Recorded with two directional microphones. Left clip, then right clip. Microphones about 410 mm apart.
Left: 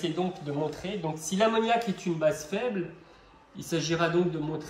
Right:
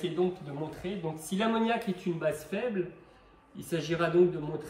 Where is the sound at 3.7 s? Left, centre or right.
Centre.